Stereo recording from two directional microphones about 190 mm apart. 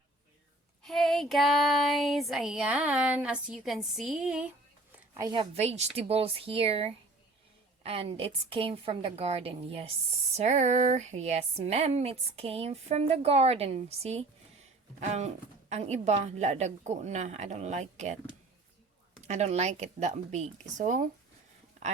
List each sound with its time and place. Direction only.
0.8 s child singing: centre (ahead or behind)
5.1 s a woman's voice: 20° right (ahead or behind); by 18.2 s 40° right (ahead or behind)
19.3 s speech: 35° right (ahead or behind)